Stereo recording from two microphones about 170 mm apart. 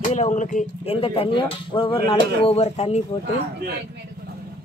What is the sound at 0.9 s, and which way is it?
Speech, 30° left (ahead or behind).